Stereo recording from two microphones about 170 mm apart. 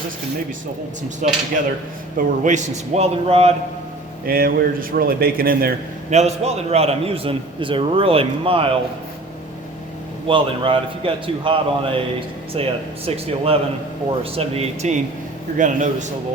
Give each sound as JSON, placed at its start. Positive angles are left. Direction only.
{"t": 1.2, "sound": "a man's voice", "side_deg": -45}
{"t": 4.3, "sound": "speech", "side_deg": -60}
{"t": 6.1, "sound": "a man's voice", "side_deg": -40}
{"t": 10.2, "sound": "a man's voice", "side_deg": -30}